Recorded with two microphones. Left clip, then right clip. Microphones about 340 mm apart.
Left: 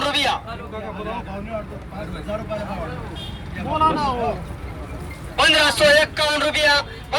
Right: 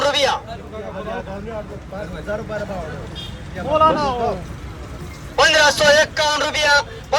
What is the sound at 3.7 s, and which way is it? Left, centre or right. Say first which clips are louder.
Speech: right 4 dB; right.